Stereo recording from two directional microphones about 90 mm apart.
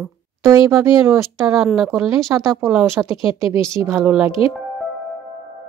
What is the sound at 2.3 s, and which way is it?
Speech, 30° right (ahead or behind).